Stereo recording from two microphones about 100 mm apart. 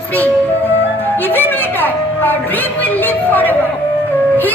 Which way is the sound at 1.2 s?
20° left (ahead or behind).